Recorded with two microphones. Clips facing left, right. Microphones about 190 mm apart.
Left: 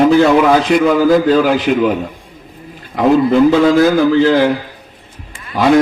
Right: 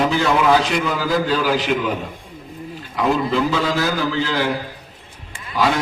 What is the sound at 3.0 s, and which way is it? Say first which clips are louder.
A man's voice: left 9 dB; 50° left (ahead or behind).